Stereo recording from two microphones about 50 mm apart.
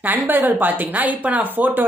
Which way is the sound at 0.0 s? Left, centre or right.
Right.